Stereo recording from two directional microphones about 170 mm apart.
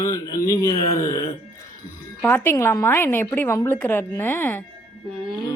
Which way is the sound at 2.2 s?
15° left (ahead or behind).